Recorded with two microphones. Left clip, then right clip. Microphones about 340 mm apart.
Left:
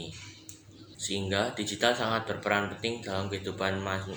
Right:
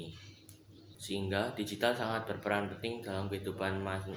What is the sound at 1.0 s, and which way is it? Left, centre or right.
Speech, right.